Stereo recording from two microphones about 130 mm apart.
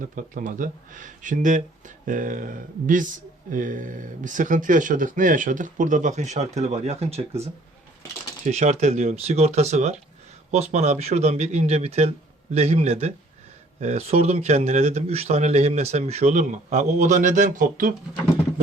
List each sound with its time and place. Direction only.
0.0 s speech: 85° right
2.0 s speech: 90° right